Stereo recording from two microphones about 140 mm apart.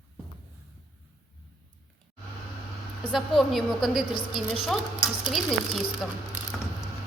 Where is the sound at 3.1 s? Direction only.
Centre (ahead or behind).